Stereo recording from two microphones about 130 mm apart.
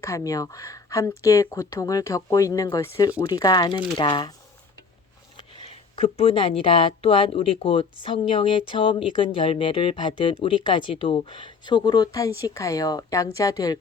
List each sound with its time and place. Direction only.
0.0 s speech: 25° left (ahead or behind)
3.2 s speech: 30° left (ahead or behind)
5.5 s speech: 45° left (ahead or behind); by 13.7 s 30° left (ahead or behind)